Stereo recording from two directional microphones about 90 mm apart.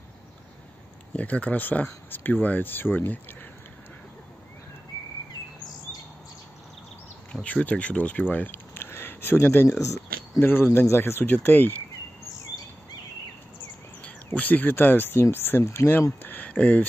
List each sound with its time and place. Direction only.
1.1 s speech: 15° left (ahead or behind)
7.4 s speech: 15° left (ahead or behind)
14.0 s speech: 15° left (ahead or behind)